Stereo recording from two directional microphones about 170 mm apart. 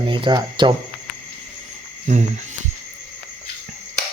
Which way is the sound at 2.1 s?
45° right (ahead or behind).